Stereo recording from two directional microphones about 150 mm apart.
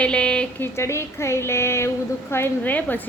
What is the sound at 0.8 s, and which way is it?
A woman's voice, 20° left (ahead or behind).